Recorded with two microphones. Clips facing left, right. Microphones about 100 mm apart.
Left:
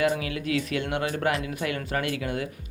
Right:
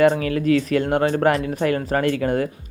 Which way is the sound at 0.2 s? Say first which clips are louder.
Right 9 dB; 45° right (ahead or behind).